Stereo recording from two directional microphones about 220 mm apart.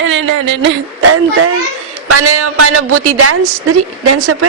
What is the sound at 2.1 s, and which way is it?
A woman's voice, 90° right.